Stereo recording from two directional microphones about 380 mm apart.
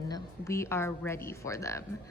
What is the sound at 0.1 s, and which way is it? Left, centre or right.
A woman's voice, centre.